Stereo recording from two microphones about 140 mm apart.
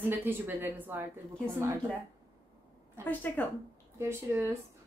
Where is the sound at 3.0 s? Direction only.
15° left (ahead or behind).